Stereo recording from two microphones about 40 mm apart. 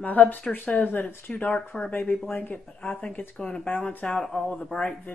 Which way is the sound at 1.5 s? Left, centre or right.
Left.